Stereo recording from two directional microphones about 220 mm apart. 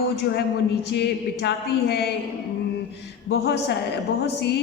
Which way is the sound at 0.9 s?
50° left (ahead or behind).